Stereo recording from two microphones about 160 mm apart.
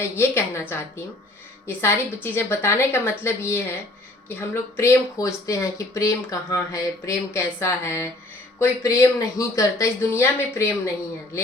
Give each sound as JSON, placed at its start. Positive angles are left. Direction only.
{"t": 0.2, "sound": "speech", "side_deg": 15}